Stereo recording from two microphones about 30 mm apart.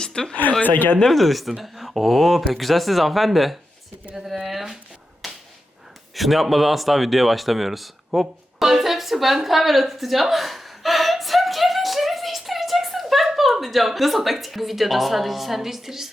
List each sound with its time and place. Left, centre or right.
0.0 s a sound: left
0.6 s speech: left
1.0 s speech: centre
4.4 s speech: centre
5.2 s whip: centre
6.1 s speech: centre